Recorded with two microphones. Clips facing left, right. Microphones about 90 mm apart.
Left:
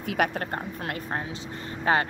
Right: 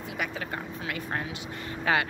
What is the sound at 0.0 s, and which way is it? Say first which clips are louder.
Speech: left 7 dB; 60° left (ahead or behind).